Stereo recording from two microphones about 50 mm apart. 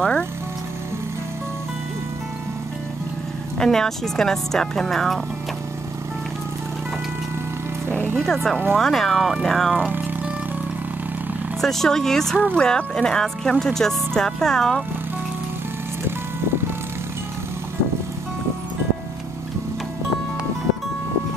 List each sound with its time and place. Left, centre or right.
0.0 s speech: centre
3.5 s speech: centre
7.9 s music: right
8.7 s speech: centre
11.6 s speech: centre